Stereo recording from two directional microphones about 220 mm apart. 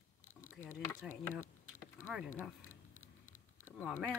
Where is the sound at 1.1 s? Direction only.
35° left (ahead or behind).